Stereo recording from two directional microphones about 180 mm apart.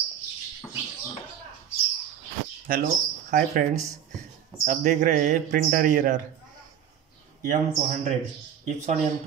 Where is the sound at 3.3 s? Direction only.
50° right (ahead or behind).